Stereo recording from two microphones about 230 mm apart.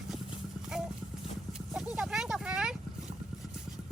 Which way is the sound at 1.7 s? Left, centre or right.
Centre.